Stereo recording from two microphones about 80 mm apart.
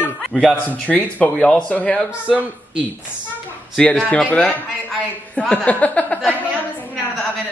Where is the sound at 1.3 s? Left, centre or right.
Centre.